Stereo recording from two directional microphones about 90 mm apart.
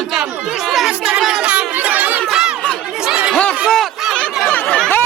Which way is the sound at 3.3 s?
10° left (ahead or behind).